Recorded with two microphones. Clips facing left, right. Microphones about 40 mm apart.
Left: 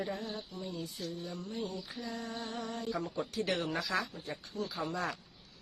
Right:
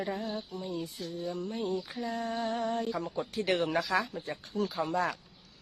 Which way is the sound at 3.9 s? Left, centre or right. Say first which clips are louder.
Right 5 dB; right.